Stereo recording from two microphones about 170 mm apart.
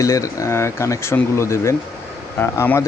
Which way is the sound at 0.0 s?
20° left (ahead or behind).